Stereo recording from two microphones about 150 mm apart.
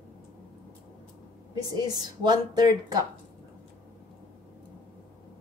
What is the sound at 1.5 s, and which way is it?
Speech, 25° right (ahead or behind).